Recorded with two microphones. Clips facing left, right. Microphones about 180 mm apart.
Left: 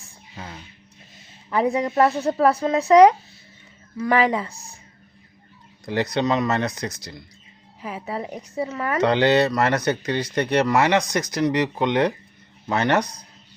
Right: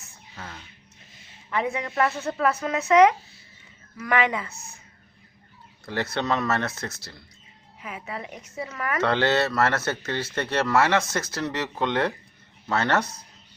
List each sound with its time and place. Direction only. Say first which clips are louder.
0.3 s a sound: left 3 dB; 20° left (ahead or behind)
1.5 s speech: left 6 dB; 35° left (ahead or behind)
5.8 s speech: left 5 dB; 15° left (ahead or behind)
7.8 s speech: left 6 dB; 35° left (ahead or behind)
9.0 s speech: left 5 dB; 15° left (ahead or behind)